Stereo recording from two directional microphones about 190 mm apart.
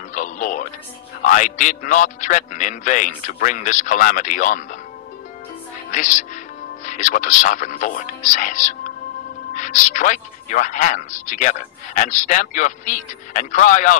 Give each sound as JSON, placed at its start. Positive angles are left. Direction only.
{"t": 0.1, "sound": "music", "side_deg": 40}
{"t": 1.2, "sound": "a man's voice", "side_deg": 45}
{"t": 5.9, "sound": "a woman's voice", "side_deg": 40}